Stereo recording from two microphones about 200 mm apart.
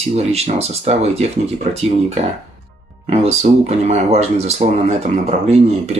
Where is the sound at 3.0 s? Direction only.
35° right (ahead or behind).